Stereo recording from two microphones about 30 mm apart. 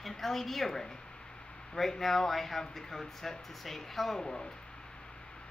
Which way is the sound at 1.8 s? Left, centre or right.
Centre.